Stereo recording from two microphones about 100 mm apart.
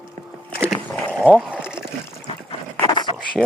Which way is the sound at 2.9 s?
50° left (ahead or behind).